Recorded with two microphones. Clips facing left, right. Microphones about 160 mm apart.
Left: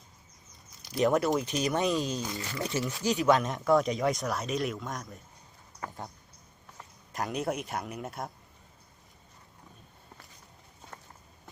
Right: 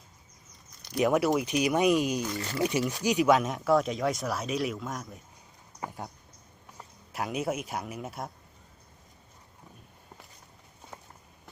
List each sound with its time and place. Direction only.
1.0 s speech: 5° right (ahead or behind)
3.2 s speech: 5° right (ahead or behind)
5.8 s a sound: 15° right (ahead or behind)
7.1 s speech: centre (ahead or behind)
10.9 s walk: 10° right (ahead or behind)